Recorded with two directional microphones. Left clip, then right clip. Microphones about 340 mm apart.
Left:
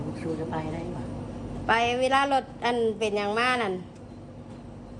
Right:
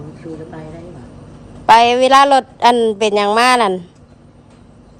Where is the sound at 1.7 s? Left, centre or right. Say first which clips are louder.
Right 14 dB; centre.